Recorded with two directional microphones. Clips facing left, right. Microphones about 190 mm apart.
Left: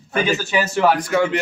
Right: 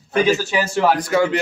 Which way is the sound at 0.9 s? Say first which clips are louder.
Right 1 dB; 40° right (ahead or behind).